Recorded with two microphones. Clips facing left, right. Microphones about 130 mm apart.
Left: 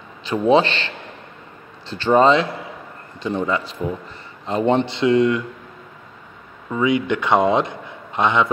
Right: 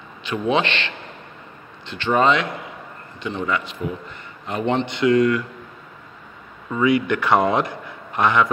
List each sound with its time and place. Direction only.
0.2 s a man's voice: 35° left (ahead or behind)
6.7 s a man's voice: 20° left (ahead or behind)